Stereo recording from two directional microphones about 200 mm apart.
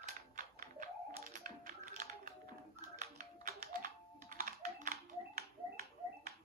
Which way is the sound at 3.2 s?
45° right (ahead or behind).